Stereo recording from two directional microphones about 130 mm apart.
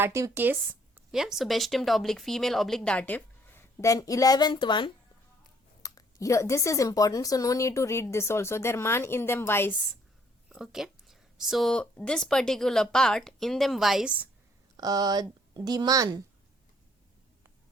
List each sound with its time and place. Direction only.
0.0 s speech: 20° right (ahead or behind)
1.1 s a woman's voice: 5° right (ahead or behind); by 9.8 s 15° left (ahead or behind)
10.5 s speech: 5° right (ahead or behind)
14.8 s speech: 30° right (ahead or behind)